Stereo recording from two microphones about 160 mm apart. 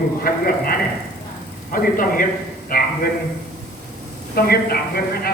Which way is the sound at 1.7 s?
60° left (ahead or behind).